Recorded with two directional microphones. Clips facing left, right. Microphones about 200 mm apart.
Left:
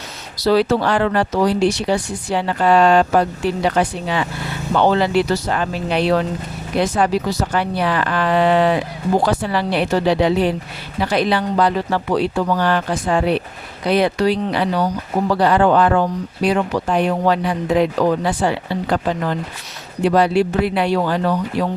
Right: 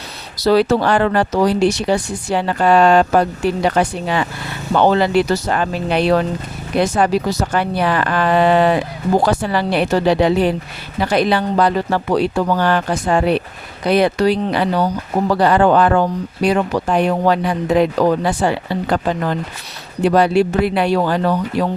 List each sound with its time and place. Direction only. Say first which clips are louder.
0.3 s speech: right 2 dB; 45° right (ahead or behind)